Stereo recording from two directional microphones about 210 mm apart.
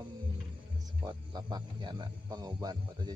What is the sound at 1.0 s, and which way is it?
Speech, 20° right (ahead or behind).